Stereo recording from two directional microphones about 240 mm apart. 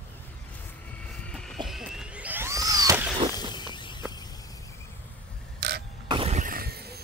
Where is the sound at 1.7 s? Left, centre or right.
Centre.